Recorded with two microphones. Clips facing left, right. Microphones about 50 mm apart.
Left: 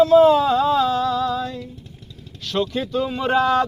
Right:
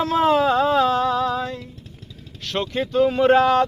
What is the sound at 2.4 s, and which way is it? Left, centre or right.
Speech, right.